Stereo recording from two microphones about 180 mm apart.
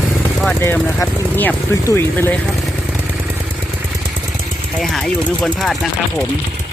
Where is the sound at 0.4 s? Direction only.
10° left (ahead or behind).